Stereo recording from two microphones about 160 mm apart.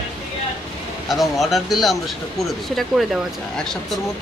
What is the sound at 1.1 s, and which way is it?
Speech, centre (ahead or behind).